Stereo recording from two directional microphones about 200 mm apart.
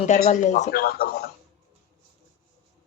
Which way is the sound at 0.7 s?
50° left (ahead or behind).